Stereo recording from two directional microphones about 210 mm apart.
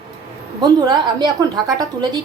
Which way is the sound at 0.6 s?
20° right (ahead or behind).